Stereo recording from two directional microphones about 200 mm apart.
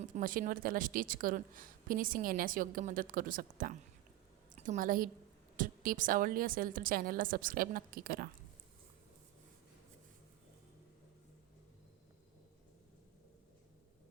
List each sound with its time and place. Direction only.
0.2 s a woman's voice: 45° right (ahead or behind)